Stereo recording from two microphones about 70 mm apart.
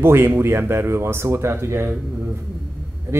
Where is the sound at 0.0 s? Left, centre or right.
Right.